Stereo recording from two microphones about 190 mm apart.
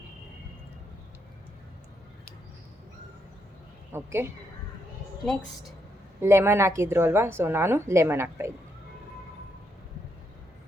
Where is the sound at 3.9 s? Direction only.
15° right (ahead or behind).